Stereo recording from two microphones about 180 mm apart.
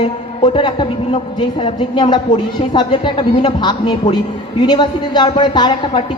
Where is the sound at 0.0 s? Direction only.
30° left (ahead or behind).